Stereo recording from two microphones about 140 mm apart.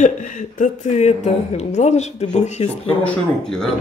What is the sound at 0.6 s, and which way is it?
A woman's voice, 55° left (ahead or behind).